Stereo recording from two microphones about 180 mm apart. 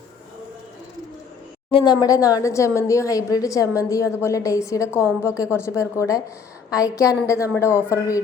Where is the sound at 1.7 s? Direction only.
25° left (ahead or behind).